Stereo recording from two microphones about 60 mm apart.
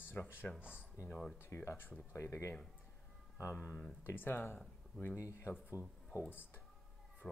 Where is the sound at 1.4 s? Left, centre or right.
Left.